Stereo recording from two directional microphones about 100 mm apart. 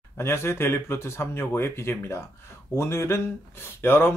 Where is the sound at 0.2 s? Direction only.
25° left (ahead or behind).